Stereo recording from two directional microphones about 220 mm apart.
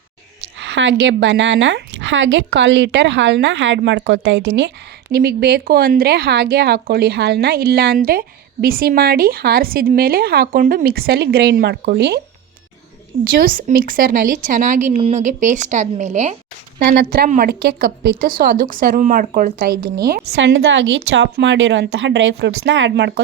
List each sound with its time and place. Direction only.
0.6 s a woman's voice: 55° right (ahead or behind)
13.4 s a woman's voice: 40° right (ahead or behind)
16.8 s a woman's voice: 45° right (ahead or behind)